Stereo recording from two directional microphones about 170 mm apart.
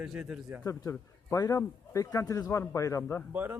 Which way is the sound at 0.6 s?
20° left (ahead or behind).